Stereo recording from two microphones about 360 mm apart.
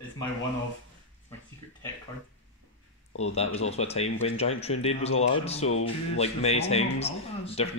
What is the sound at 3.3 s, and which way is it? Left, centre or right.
Speech, centre.